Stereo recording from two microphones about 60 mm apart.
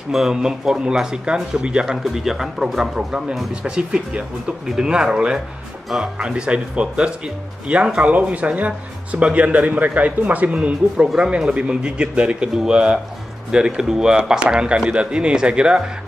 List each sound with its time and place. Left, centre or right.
0.1 s speech: centre